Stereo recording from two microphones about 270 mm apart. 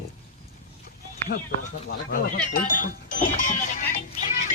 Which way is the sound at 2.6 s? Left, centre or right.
Left.